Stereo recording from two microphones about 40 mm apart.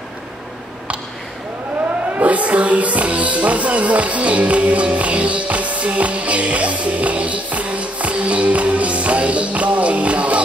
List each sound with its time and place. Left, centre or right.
2.1 s music: right